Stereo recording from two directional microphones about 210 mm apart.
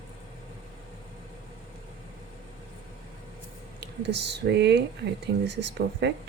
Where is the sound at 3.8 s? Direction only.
55° right (ahead or behind).